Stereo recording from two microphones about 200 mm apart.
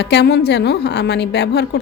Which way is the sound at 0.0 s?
55° left (ahead or behind).